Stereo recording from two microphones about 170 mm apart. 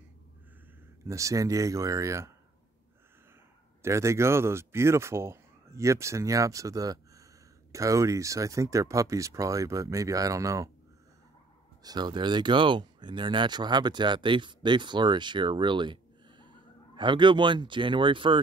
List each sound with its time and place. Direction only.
1.0 s speech: 20° right (ahead or behind)
3.8 s speech: 15° right (ahead or behind)
11.8 s speech: 25° right (ahead or behind)